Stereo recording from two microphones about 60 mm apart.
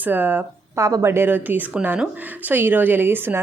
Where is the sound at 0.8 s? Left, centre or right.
Right.